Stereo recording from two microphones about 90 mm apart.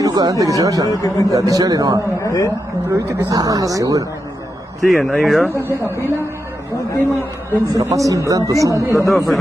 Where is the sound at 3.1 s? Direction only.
40° right (ahead or behind).